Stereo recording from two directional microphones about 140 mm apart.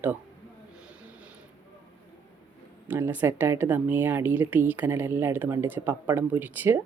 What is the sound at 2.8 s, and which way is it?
A woman's voice, 15° right (ahead or behind).